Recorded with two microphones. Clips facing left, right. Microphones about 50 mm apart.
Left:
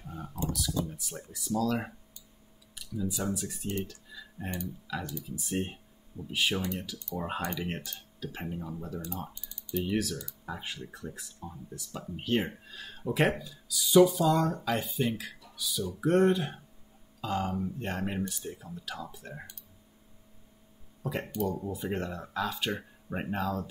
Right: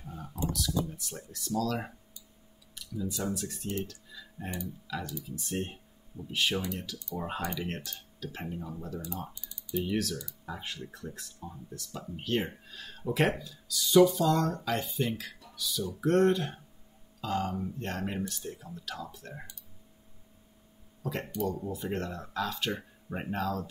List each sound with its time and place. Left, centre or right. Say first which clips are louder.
0.0 s a sound: left 2 dB; centre
0.5 s speech: right 1 dB; centre
3.8 s music: even; centre
4.8 s speech: left 1 dB; centre
9.3 s typing: even; left
9.8 s speech: left 2 dB; centre
21.0 s speech: left 1 dB; centre